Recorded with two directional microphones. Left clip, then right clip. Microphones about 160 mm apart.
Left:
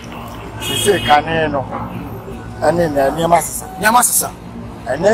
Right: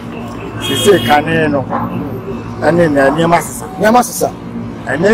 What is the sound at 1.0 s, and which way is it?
Speech, 30° right (ahead or behind).